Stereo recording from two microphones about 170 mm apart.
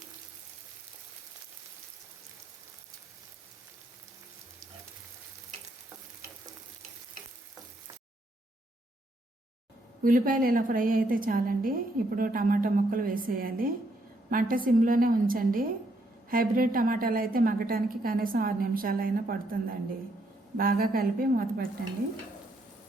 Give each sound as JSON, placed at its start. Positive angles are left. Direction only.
{"t": 10.0, "sound": "a woman's voice", "side_deg": -55}